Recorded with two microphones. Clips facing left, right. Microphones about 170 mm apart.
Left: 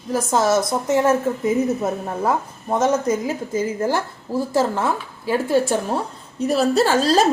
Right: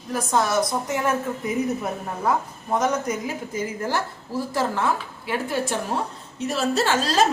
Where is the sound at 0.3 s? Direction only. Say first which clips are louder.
Left 3 dB; 25° left (ahead or behind).